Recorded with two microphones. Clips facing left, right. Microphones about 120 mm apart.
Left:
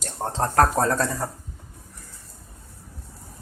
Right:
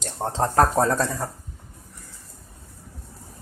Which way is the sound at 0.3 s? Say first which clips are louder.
Right 1 dB; 5° right (ahead or behind).